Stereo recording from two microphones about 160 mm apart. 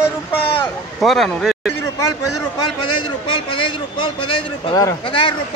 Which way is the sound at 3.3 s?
30° left (ahead or behind).